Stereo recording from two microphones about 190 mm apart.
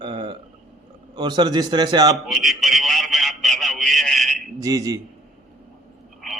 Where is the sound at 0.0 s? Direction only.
25° right (ahead or behind).